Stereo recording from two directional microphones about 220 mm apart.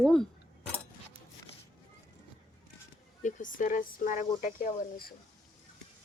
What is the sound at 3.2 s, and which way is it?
Speech, 35° left (ahead or behind).